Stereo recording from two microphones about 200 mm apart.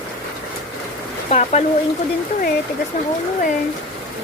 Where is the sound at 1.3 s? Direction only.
35° left (ahead or behind).